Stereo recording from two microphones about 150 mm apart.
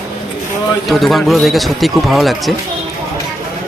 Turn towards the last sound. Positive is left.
turn(degrees=0)  # may be behind; listen again after turning